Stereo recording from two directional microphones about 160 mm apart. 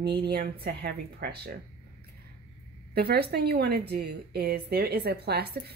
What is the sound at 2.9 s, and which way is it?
A woman's voice, 80° right.